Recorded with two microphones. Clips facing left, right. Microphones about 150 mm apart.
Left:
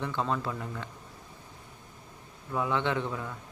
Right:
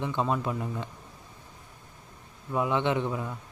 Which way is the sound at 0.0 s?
15° right (ahead or behind).